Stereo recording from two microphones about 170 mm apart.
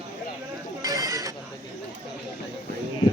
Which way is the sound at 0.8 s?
20° right (ahead or behind).